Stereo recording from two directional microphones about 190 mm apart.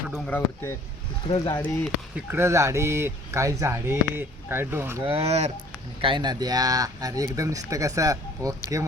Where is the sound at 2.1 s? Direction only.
10° right (ahead or behind).